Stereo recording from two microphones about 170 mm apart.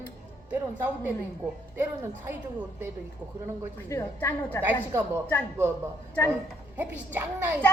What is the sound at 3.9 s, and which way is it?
Speech, 15° left (ahead or behind).